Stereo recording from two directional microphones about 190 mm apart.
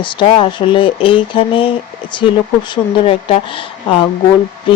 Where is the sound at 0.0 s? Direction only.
25° left (ahead or behind).